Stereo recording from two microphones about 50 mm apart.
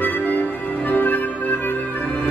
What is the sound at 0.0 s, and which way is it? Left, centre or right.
Music, left.